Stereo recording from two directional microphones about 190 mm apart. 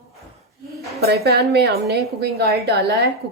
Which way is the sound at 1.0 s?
60° right (ahead or behind).